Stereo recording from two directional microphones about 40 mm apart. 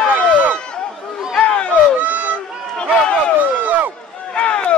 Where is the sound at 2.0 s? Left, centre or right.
Right.